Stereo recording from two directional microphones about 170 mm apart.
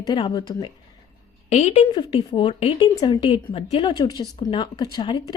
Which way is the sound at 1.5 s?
35° left (ahead or behind).